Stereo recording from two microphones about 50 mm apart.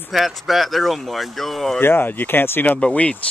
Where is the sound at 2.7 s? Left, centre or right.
Left.